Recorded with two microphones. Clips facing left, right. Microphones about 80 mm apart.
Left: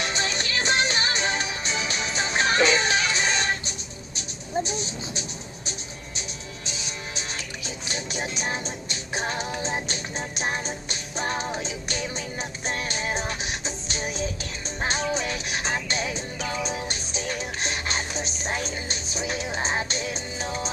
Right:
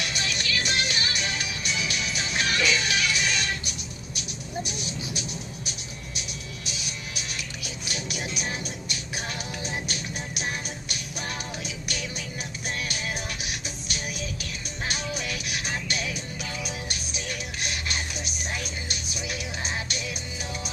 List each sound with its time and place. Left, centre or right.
0.0 s music: left